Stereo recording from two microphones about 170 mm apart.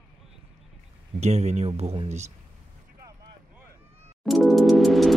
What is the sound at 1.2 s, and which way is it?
Speech, 40° right (ahead or behind).